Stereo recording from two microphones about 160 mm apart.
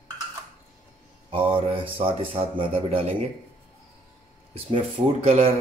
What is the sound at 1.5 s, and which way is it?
A man's voice, 35° right (ahead or behind).